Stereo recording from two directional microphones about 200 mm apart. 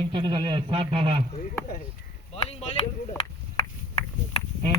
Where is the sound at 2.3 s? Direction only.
30° left (ahead or behind).